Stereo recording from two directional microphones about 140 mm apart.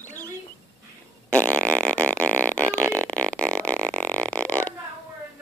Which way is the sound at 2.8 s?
20° right (ahead or behind).